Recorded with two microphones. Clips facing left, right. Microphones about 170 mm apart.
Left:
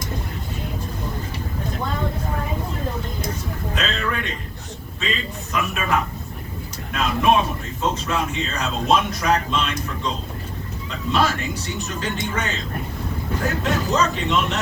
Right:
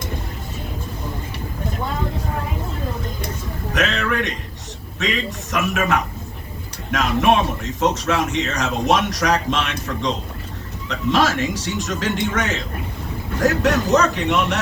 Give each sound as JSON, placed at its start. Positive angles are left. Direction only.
{"t": 3.8, "sound": "a sound", "side_deg": -80}
{"t": 4.9, "sound": "a man's voice", "side_deg": -80}
{"t": 13.4, "sound": "speech", "side_deg": -75}